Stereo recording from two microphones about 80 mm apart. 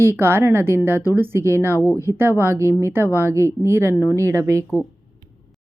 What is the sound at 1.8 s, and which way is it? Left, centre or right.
Speech, left.